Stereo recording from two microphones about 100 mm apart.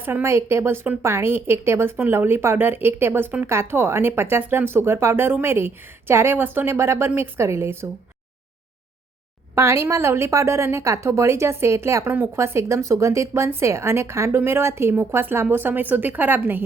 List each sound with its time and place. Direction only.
0.0 s a woman's voice: 25° right (ahead or behind)
9.6 s a woman's voice: 25° right (ahead or behind)